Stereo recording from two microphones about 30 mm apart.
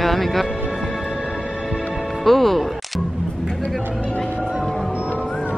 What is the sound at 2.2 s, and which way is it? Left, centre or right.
Speech, centre.